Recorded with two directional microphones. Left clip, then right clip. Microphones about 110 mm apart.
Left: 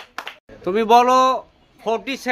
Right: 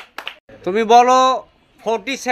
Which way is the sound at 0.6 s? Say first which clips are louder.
Right 3 dB; 20° right (ahead or behind).